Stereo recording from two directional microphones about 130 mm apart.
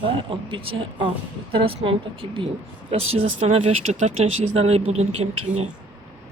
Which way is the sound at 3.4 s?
55° right (ahead or behind).